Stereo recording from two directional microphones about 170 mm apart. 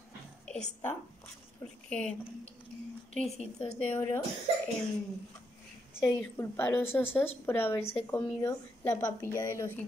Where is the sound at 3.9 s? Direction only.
15° left (ahead or behind).